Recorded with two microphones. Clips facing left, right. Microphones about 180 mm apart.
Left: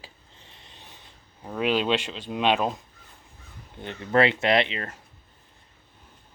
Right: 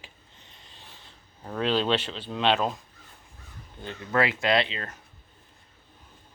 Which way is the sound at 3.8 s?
25° left (ahead or behind).